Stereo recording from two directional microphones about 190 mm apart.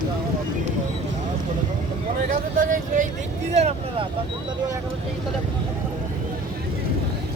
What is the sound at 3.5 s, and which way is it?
Vehicle, 35° right (ahead or behind).